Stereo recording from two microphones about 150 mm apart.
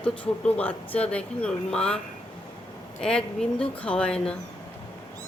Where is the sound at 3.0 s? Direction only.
5° left (ahead or behind).